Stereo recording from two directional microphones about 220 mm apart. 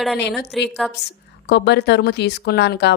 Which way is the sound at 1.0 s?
50° left (ahead or behind).